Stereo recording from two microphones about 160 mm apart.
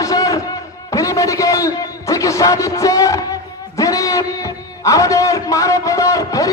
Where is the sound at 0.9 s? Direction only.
20° left (ahead or behind).